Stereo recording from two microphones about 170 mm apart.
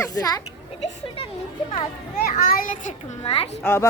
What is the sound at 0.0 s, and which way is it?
Speech, 20° left (ahead or behind).